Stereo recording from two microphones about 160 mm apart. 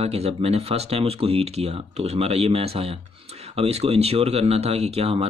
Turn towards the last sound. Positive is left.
turn(degrees=-40)  # may be behind; listen again after turning